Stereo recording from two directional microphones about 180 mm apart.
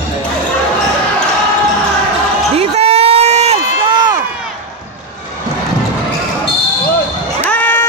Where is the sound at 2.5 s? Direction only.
35° right (ahead or behind).